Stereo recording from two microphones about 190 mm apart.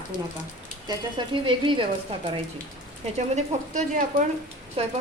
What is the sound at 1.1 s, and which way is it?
Speech, 25° right (ahead or behind).